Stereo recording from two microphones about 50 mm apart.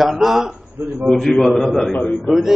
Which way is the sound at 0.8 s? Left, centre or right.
Right.